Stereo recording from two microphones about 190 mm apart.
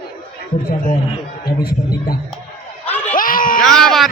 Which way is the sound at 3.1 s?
45° left (ahead or behind).